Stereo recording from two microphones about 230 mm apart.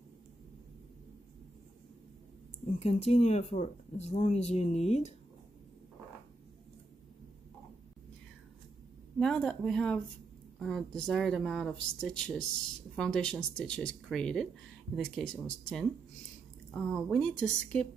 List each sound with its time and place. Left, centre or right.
2.6 s speech: left
9.2 s speech: centre